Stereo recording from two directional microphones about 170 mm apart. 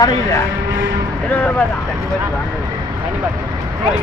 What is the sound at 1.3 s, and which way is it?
Speech, 10° left (ahead or behind).